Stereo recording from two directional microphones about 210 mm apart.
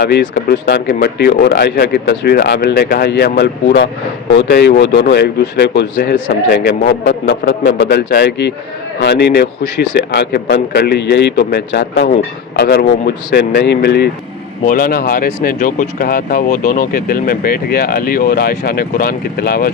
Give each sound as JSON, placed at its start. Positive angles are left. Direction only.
{"t": 0.0, "sound": "speech", "side_deg": 50}